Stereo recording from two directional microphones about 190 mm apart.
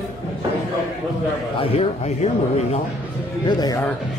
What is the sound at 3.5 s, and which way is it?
Speech, 20° left (ahead or behind).